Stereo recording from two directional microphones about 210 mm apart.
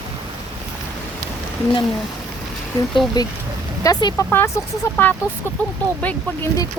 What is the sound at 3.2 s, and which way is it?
Speech, 20° left (ahead or behind).